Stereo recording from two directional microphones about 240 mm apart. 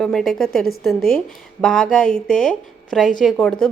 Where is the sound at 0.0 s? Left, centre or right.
Centre.